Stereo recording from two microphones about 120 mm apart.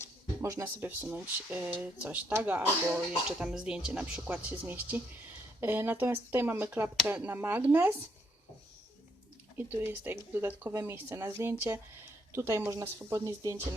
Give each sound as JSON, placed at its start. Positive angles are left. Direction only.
{"t": 0.4, "sound": "speech", "side_deg": -25}
{"t": 9.6, "sound": "speech", "side_deg": -20}